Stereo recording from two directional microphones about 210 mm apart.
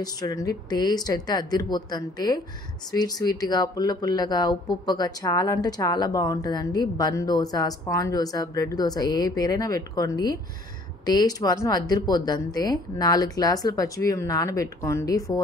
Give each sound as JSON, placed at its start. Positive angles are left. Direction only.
{"t": 0.0, "sound": "a woman's voice", "side_deg": 15}